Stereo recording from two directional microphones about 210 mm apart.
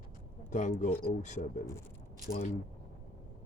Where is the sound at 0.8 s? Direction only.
35° left (ahead or behind).